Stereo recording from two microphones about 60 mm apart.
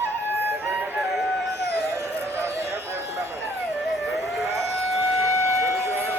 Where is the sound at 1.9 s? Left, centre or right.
Right.